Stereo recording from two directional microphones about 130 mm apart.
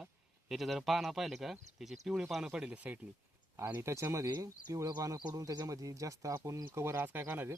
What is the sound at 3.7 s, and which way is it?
Speech, 20° right (ahead or behind).